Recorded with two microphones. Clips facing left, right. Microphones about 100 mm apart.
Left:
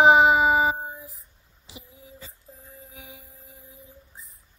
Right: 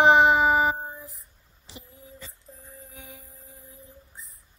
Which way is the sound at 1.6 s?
15° left (ahead or behind).